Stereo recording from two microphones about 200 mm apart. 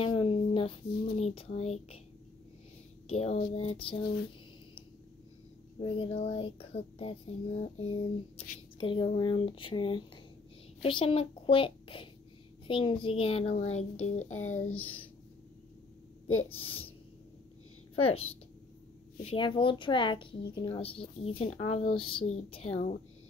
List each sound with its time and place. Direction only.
0.0 s a sound: 25° left (ahead or behind)
3.1 s speech: 30° left (ahead or behind)
5.8 s a child's voice: 30° left (ahead or behind)
16.4 s speech: 25° left (ahead or behind)
17.9 s speech: 30° left (ahead or behind)